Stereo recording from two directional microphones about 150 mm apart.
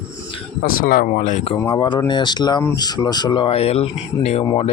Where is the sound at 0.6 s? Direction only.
70° left (ahead or behind).